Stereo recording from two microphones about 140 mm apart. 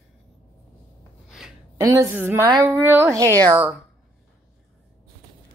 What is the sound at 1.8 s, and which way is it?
A woman's voice, 20° right (ahead or behind).